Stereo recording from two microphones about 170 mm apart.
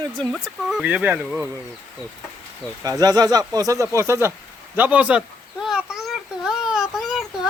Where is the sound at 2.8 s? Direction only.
20° right (ahead or behind).